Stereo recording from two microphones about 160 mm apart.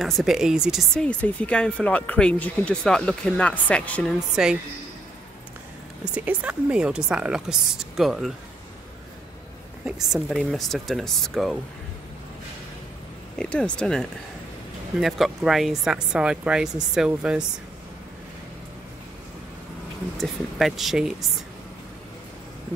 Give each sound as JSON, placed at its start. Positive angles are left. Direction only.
{"t": 0.0, "sound": "speech", "side_deg": 0}
{"t": 4.4, "sound": "speech", "side_deg": -5}
{"t": 6.1, "sound": "speech", "side_deg": -10}
{"t": 9.8, "sound": "speech", "side_deg": -5}
{"t": 13.4, "sound": "speech", "side_deg": 5}
{"t": 20.2, "sound": "speech", "side_deg": 0}